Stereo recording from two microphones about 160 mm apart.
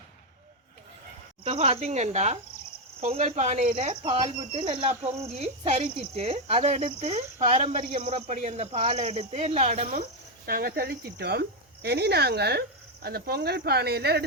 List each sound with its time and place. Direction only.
1.5 s speech: 40° right (ahead or behind)
10.4 s speech: 70° right (ahead or behind); by 14.3 s 90° right